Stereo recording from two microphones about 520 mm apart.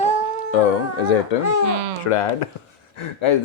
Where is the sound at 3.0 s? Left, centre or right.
Left.